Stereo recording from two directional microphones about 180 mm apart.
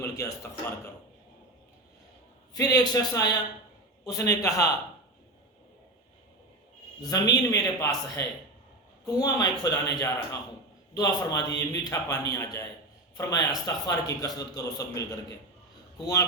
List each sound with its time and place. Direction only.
0.0 s a man's voice: 15° left (ahead or behind)
2.5 s a man's voice: 20° left (ahead or behind)
7.0 s a man's voice: 20° left (ahead or behind)